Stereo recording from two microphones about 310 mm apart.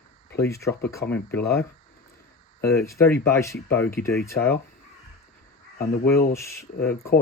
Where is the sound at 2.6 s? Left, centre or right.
Centre.